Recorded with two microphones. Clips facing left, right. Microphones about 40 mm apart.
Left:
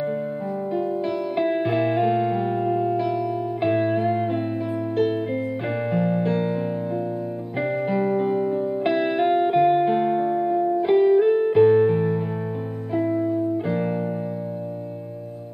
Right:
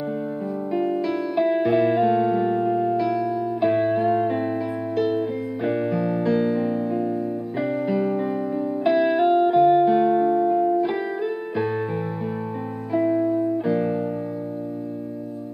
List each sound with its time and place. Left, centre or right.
1.3 s music: left
3.1 s music: left
3.6 s music: centre
4.9 s music: left
5.7 s music: centre
5.9 s music: left
7.8 s music: left
8.8 s music: centre
10.1 s music: centre
10.8 s music: left
12.9 s music: right